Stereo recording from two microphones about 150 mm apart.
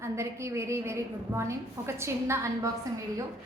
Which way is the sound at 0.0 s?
20° right (ahead or behind).